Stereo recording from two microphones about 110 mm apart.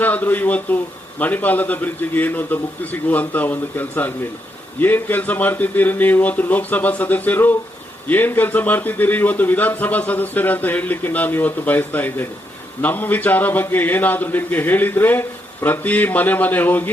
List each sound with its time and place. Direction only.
0.0 s a man's voice: 15° left (ahead or behind)